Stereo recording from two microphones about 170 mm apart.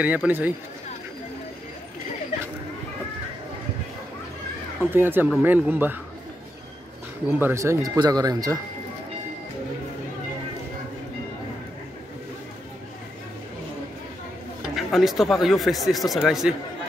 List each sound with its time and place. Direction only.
0.0 s speech: 10° right (ahead or behind)
4.9 s speech: 10° right (ahead or behind)
7.2 s speech: 10° right (ahead or behind)
14.8 s speech: centre (ahead or behind)